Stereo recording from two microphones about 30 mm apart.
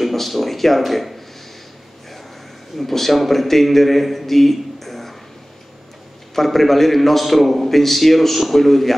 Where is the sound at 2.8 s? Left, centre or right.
Centre.